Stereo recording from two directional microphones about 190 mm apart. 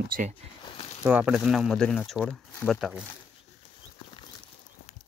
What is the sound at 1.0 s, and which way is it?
Speech, 10° right (ahead or behind).